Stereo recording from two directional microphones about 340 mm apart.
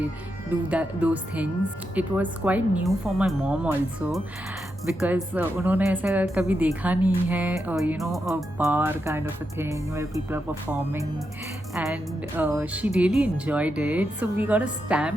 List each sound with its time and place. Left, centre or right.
0.7 s speech: centre